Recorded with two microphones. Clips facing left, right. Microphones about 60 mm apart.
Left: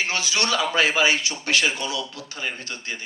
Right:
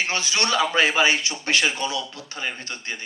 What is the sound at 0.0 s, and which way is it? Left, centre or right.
A man's voice, right.